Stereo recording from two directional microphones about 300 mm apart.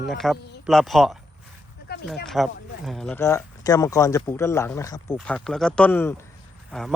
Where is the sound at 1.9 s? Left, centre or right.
Left.